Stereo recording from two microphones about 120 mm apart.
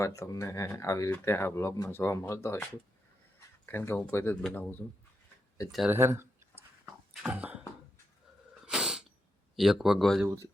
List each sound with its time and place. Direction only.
0.0 s speech: 25° left (ahead or behind)
3.7 s speech: 20° left (ahead or behind)
5.9 s speech: 20° right (ahead or behind)
7.1 s cough: 10° right (ahead or behind)
8.6 s cat: 5° right (ahead or behind)
9.6 s speech: 5° right (ahead or behind)